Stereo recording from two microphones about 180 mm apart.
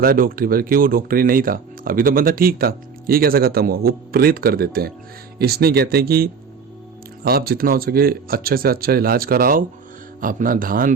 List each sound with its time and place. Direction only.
0.0 s speech: 55° right (ahead or behind)